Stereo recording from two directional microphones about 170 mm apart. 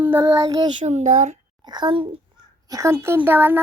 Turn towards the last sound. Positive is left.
turn(degrees=-15)  # may be behind; listen again after turning